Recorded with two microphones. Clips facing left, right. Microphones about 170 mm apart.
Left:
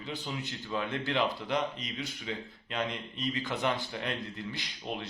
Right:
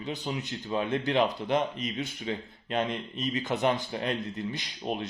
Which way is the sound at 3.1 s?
20° right (ahead or behind).